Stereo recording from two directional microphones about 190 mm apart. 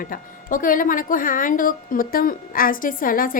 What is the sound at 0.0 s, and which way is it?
A woman's voice, 45° left (ahead or behind).